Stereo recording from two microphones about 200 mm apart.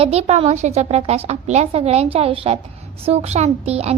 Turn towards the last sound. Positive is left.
turn(degrees=-30)  # may be behind; listen again after turning